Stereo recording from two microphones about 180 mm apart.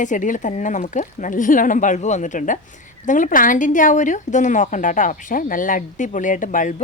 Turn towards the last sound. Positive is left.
turn(degrees=45)  # may be behind; listen again after turning